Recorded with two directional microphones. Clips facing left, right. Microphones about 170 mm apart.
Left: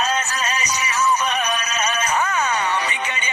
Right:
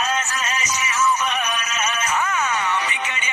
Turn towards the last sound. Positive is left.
turn(degrees=35)  # may be behind; listen again after turning